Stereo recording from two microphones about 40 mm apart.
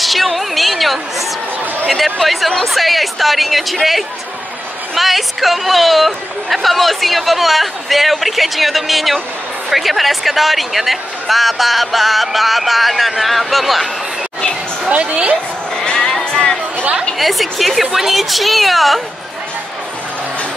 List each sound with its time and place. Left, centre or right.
0.0 s a sound: centre
1.9 s speech: centre
14.9 s a woman's voice: right
15.7 s sheep: left
16.3 s chatter: left
17.2 s speech: centre